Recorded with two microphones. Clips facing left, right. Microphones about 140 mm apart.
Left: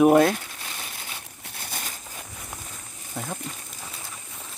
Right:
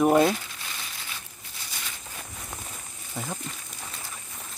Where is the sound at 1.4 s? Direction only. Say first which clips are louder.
Left 4 dB; 55° left (ahead or behind).